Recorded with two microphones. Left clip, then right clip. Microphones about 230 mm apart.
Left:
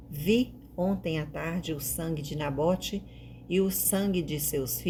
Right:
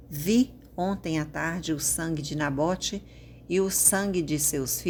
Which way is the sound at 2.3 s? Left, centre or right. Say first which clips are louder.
Right 3 dB; right.